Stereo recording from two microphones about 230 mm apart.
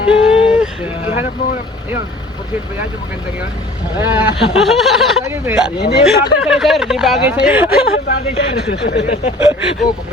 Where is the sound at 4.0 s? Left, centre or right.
Centre.